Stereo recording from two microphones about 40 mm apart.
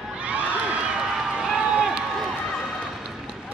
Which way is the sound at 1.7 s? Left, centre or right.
Centre.